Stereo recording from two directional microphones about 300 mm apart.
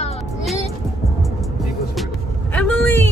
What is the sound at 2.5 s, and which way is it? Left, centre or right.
Vehicle, centre.